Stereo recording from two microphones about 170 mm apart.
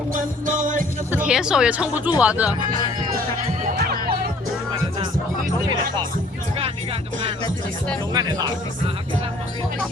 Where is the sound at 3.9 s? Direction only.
60° right (ahead or behind).